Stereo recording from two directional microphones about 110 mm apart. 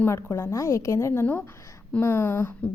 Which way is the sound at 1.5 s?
25° left (ahead or behind).